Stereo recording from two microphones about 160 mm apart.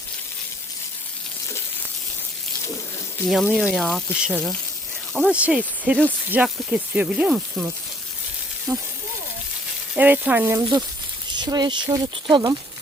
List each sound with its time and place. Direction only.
3.2 s speech: centre (ahead or behind)
5.1 s speech: 5° right (ahead or behind)
9.9 s speech: 10° right (ahead or behind)
11.3 s speech: 25° right (ahead or behind)